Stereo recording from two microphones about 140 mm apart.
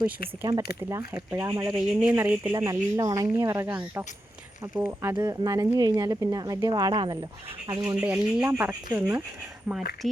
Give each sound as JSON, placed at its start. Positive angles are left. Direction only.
{"t": 0.4, "sound": "speech", "side_deg": -25}
{"t": 1.7, "sound": "speech", "side_deg": -10}
{"t": 2.6, "sound": "speech", "side_deg": -25}
{"t": 5.1, "sound": "speech", "side_deg": -30}
{"t": 7.7, "sound": "speech", "side_deg": -20}